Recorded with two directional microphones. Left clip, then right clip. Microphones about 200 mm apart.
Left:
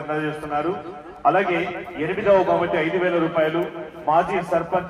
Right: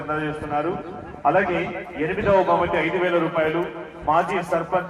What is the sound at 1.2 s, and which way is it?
Speech, 20° left (ahead or behind).